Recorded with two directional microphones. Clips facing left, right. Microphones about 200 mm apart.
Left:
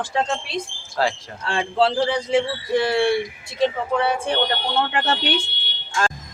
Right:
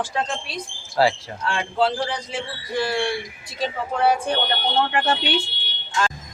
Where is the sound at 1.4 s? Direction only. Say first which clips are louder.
Left 2 dB; 30° left (ahead or behind).